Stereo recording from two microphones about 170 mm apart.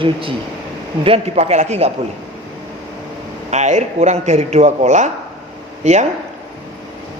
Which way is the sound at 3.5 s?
45° right (ahead or behind).